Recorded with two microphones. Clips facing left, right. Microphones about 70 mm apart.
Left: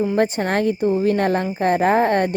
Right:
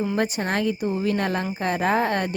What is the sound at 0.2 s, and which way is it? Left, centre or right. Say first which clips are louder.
Speech: left 5 dB; left.